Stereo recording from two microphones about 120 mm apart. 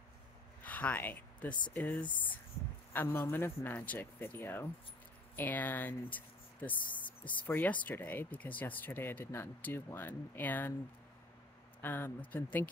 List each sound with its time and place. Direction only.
0.6 s a sound: 15° left (ahead or behind)
1.7 s speech: 15° left (ahead or behind)
11.8 s speech: 15° left (ahead or behind)